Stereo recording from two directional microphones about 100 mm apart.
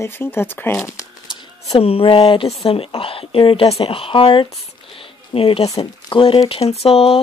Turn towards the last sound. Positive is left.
turn(degrees=85)